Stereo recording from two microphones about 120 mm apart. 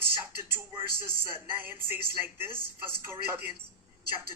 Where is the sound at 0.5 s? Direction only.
20° right (ahead or behind).